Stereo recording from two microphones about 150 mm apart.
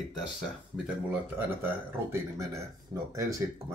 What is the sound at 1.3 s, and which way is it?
Speech, 15° right (ahead or behind).